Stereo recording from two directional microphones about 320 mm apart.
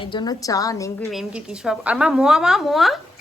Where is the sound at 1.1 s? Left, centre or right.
Centre.